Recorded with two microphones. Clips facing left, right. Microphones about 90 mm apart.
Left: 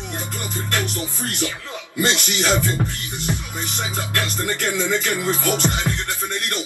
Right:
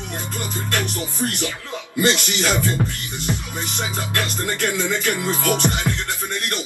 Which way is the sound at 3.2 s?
20° right (ahead or behind).